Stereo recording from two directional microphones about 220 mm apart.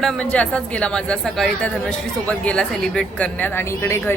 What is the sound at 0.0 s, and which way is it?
Speech, 5° left (ahead or behind).